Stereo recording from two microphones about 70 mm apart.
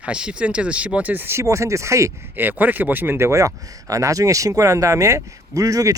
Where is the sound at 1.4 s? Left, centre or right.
Right.